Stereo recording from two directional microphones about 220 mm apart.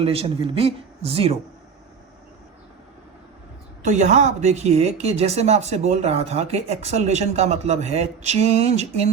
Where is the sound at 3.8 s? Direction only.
30° right (ahead or behind).